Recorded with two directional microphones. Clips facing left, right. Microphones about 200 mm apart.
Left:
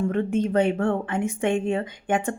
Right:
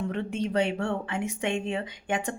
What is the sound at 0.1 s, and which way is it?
A woman's voice, 50° left (ahead or behind).